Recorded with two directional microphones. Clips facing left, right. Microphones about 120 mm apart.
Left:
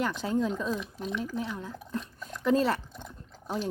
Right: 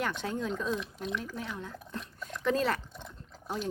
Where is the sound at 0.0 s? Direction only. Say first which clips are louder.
Left 5 dB; centre (ahead or behind).